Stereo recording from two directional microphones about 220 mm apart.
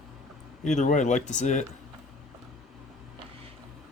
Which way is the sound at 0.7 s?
35° left (ahead or behind).